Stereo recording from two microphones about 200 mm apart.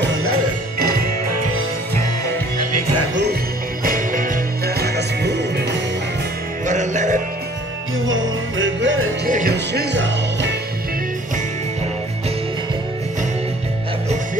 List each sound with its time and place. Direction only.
3.8 s music: 45° right (ahead or behind)
6.6 s music: 35° right (ahead or behind)
8.1 s music: 70° right (ahead or behind)
9.2 s music: 45° right (ahead or behind); by 10.5 s 65° right (ahead or behind)